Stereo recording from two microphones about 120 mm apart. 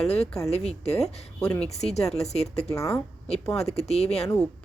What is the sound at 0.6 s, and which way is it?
Speech, 60° left (ahead or behind).